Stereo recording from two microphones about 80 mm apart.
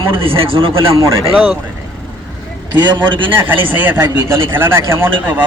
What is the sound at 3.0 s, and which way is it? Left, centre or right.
Speech, right.